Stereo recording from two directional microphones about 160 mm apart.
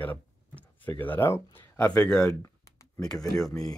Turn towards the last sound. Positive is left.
turn(degrees=20)  # may be behind; listen again after turning